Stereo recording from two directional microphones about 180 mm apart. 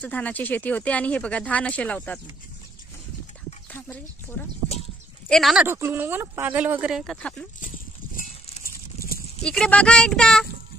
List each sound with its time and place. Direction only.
0.0 s speech: 10° left (ahead or behind)
3.7 s speech: 10° left (ahead or behind)
5.3 s speech: centre (ahead or behind)
5.7 s speech: 15° right (ahead or behind); by 7.4 s 5° left (ahead or behind)
7.6 s a sound: 50° left (ahead or behind)
9.4 s speech: 5° left (ahead or behind)